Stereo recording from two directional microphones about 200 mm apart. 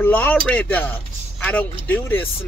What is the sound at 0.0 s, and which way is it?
Speech, 10° left (ahead or behind).